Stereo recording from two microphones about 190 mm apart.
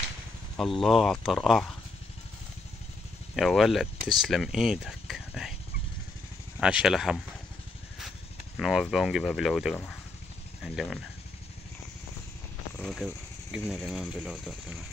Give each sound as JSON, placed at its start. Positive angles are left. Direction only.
{"t": 0.6, "sound": "speech", "side_deg": 0}
{"t": 3.3, "sound": "speech", "side_deg": 0}
{"t": 6.6, "sound": "speech", "side_deg": -5}
{"t": 8.5, "sound": "speech", "side_deg": 0}
{"t": 12.7, "sound": "speech", "side_deg": 5}